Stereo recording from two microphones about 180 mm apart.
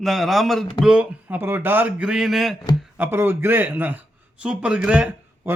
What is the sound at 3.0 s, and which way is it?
A man's voice, 10° right (ahead or behind).